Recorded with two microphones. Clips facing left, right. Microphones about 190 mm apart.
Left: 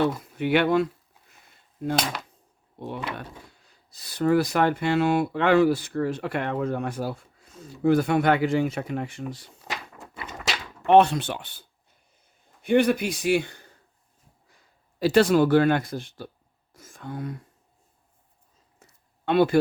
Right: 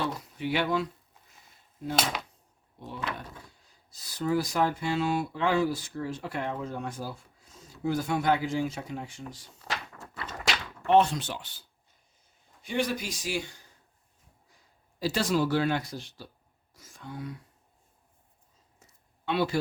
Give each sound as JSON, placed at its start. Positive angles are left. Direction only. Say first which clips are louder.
{"t": 0.0, "sound": "speech", "louder": "left 7 dB", "side_deg": 60}
{"t": 2.8, "sound": "speech", "louder": "left 4 dB", "side_deg": 60}
{"t": 9.6, "sound": "a sound", "louder": "left 1 dB", "side_deg": 15}
{"t": 10.8, "sound": "speech", "louder": "left 5 dB", "side_deg": 65}
{"t": 14.9, "sound": "speech", "louder": "left 9 dB", "side_deg": 60}
{"t": 16.7, "sound": "whispering", "louder": "left 5 dB", "side_deg": 50}
{"t": 18.8, "sound": "a sound", "louder": "left 5 dB", "side_deg": 55}